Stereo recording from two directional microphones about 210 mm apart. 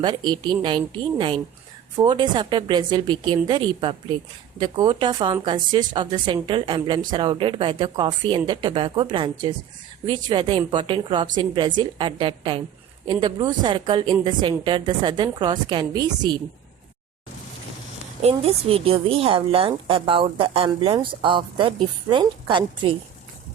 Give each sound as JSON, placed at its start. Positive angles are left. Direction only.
{"t": 0.0, "sound": "a woman's voice", "side_deg": -20}
{"t": 18.2, "sound": "a woman's voice", "side_deg": -30}